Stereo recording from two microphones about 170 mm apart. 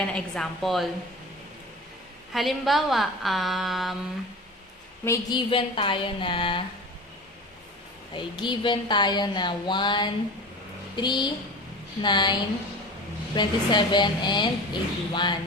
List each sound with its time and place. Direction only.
0.0 s a woman's voice: 5° left (ahead or behind)
2.3 s a woman's voice: centre (ahead or behind)
5.0 s a woman's voice: 20° left (ahead or behind)
5.5 s a woman's voice: 30° left (ahead or behind)
8.1 s a woman's voice: 25° left (ahead or behind)